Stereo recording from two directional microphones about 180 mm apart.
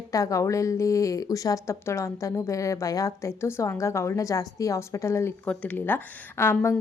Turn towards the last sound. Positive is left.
turn(degrees=15)  # may be behind; listen again after turning